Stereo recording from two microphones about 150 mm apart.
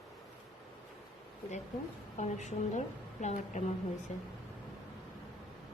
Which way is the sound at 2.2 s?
50° left (ahead or behind).